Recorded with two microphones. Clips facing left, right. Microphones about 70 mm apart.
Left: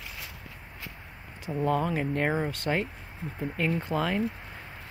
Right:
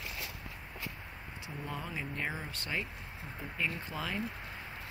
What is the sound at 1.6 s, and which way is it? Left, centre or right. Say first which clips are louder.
Speech: left 14 dB; left.